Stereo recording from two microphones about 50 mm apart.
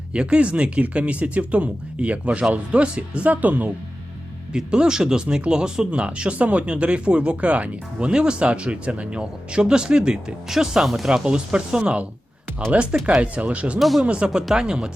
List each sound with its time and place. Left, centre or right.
0.1 s speech: right
4.5 s speech: centre
13.7 s speech: centre
14.0 s speech: right
14.5 s speech: centre